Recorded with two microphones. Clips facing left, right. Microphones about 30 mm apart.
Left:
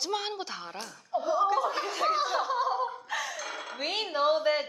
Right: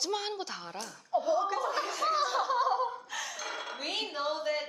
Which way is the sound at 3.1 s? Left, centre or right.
Centre.